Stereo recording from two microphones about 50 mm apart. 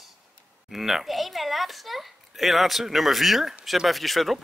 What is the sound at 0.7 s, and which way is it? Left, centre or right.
A child's voice, centre.